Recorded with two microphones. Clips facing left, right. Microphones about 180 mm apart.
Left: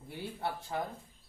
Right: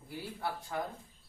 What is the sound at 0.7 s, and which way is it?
Speech, 25° left (ahead or behind).